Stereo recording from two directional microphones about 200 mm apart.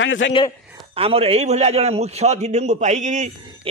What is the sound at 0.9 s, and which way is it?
A man's voice, 30° right (ahead or behind).